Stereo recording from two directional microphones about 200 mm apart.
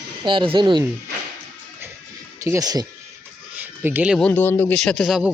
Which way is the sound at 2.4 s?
15° right (ahead or behind).